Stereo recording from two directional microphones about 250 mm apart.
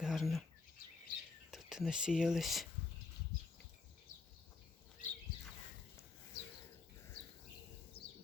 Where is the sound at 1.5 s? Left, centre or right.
Centre.